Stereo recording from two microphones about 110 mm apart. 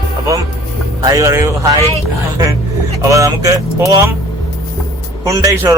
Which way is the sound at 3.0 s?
30° right (ahead or behind).